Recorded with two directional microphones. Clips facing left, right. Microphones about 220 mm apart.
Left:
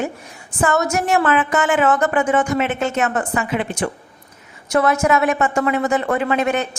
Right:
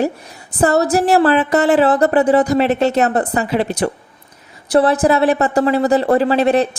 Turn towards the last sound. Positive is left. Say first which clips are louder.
# right 5 dB
turn(degrees=-35)  # may be behind; listen again after turning